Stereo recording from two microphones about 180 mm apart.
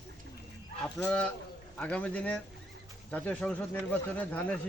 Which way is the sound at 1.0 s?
5° left (ahead or behind).